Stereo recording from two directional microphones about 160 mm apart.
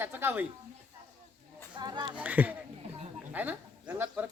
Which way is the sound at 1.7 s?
25° right (ahead or behind).